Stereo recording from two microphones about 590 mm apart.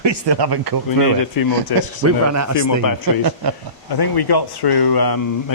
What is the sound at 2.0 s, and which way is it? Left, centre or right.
Speech, right.